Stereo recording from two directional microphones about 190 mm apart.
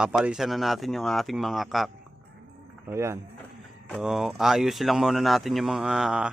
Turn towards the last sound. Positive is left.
turn(degrees=-5)  # may be behind; listen again after turning